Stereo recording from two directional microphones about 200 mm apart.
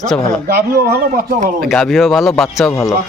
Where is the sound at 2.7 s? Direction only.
15° left (ahead or behind).